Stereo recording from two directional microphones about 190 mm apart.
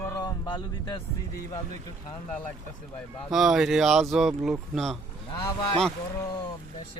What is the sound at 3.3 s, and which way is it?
Speech, centre (ahead or behind).